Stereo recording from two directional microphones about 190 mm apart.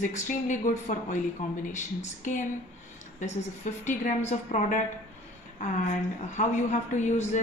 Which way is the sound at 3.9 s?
40° left (ahead or behind).